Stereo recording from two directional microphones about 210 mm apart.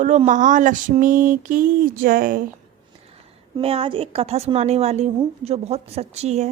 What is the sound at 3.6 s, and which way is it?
A woman's voice, 25° right (ahead or behind).